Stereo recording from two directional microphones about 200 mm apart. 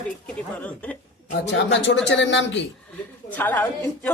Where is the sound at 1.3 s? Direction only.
65° left (ahead or behind).